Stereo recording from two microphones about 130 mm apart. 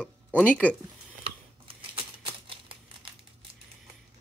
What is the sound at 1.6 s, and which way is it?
Crumpling, 40° right (ahead or behind).